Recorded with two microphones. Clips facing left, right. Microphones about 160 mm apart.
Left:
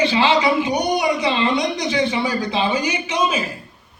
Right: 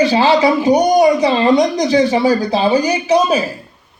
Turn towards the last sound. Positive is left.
turn(degrees=-35)  # may be behind; listen again after turning